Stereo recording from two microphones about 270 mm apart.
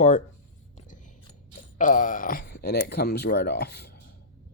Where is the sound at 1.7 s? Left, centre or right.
Left.